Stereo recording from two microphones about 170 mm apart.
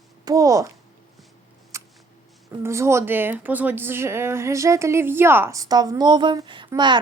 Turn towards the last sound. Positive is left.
turn(degrees=-25)  # may be behind; listen again after turning